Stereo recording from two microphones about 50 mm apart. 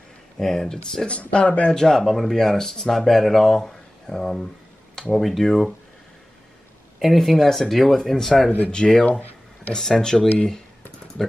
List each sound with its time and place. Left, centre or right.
0.4 s speech: centre
1.0 s speech: left
1.7 s speech: centre
7.0 s speech: centre
8.7 s speech: centre
9.8 s speech: centre